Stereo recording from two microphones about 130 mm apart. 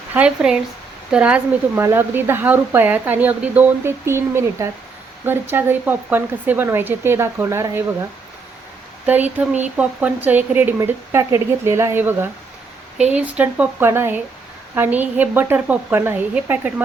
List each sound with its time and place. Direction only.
0.1 s speech: 10° right (ahead or behind)
9.0 s speech: 15° right (ahead or behind)